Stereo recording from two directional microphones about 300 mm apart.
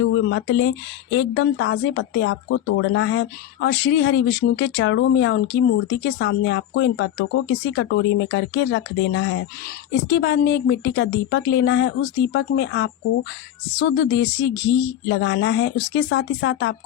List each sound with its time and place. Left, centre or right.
0.0 s speech: left